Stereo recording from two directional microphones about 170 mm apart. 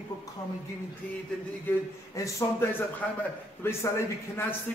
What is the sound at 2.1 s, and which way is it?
A man's voice, 20° left (ahead or behind).